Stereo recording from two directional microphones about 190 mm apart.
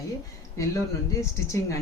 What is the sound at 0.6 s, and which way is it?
Speech, 15° left (ahead or behind).